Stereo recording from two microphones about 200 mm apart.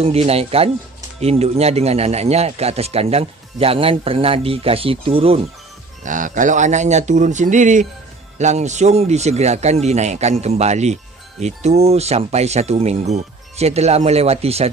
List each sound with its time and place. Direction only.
0.0 s a man's voice: 30° right (ahead or behind)
6.0 s speech: 40° right (ahead or behind)